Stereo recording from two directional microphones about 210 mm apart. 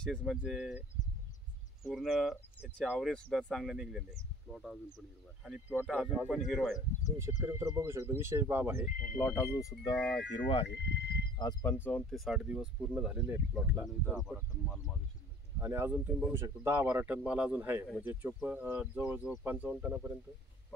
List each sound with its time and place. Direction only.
0.0 s speech: 5° left (ahead or behind)
1.9 s speech: centre (ahead or behind)
7.2 s speech: 10° right (ahead or behind)
8.8 s speech: 40° left (ahead or behind)
9.1 s speech: 5° left (ahead or behind)
10.3 s speech: 25° left (ahead or behind)
10.7 s speech: 55° left (ahead or behind)
11.3 s speech: 15° left (ahead or behind); by 14.3 s centre (ahead or behind)
15.6 s speech: 10° right (ahead or behind)